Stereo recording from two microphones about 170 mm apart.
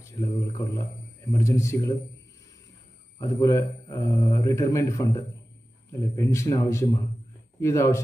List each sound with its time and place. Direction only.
0.0 s a man's voice: 20° left (ahead or behind)
3.2 s a man's voice: 20° left (ahead or behind)